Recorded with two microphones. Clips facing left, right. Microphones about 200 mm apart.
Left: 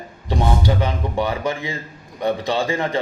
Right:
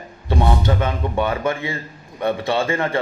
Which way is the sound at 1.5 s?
15° left (ahead or behind).